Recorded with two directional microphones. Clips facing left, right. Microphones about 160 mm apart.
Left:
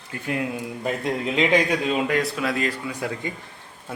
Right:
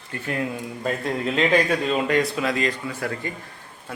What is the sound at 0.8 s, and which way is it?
Speech, 15° left (ahead or behind).